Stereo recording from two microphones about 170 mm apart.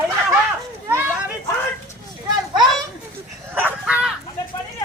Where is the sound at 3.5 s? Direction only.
10° right (ahead or behind).